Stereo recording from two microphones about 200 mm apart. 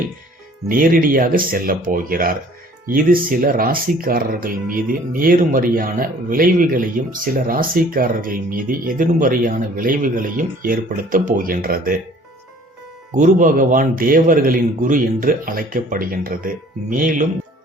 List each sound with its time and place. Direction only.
0.7 s speech: 45° right (ahead or behind)
13.1 s speech: 40° right (ahead or behind)